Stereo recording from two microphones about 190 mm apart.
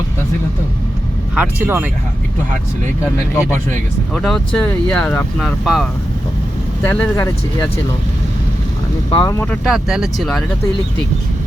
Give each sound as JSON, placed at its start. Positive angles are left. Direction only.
{"t": 1.4, "sound": "speech", "side_deg": -10}
{"t": 3.5, "sound": "speech", "side_deg": 5}
{"t": 6.8, "sound": "speech", "side_deg": 10}
{"t": 9.1, "sound": "speech", "side_deg": 15}
{"t": 9.6, "sound": "speech", "side_deg": 0}